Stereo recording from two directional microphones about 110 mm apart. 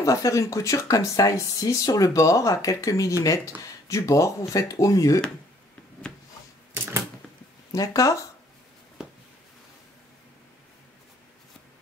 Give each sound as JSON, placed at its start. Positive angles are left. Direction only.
{"t": 0.0, "sound": "speech", "side_deg": 30}
{"t": 7.7, "sound": "speech", "side_deg": 30}